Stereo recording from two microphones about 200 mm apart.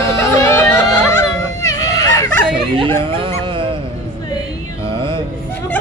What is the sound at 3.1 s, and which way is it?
Dog, 25° right (ahead or behind).